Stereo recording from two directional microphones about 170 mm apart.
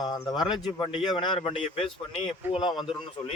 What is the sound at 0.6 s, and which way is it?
Speech, 25° left (ahead or behind).